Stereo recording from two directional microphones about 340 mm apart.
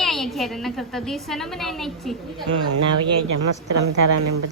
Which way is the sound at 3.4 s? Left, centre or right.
Right.